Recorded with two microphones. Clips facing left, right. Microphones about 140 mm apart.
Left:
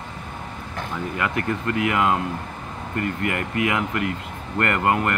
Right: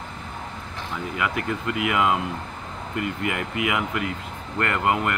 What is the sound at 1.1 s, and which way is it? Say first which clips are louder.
Speech: left 1 dB; 5° right (ahead or behind).